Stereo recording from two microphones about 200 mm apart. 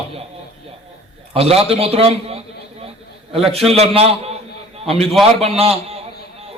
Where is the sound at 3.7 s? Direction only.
30° right (ahead or behind).